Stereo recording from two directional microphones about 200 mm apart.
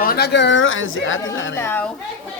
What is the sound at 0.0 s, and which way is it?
Speech, 55° left (ahead or behind).